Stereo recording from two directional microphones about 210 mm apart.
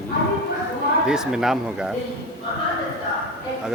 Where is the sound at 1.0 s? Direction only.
5° right (ahead or behind).